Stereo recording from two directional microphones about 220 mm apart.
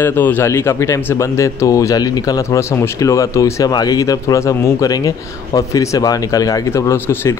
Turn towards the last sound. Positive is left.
turn(degrees=10)  # may be behind; listen again after turning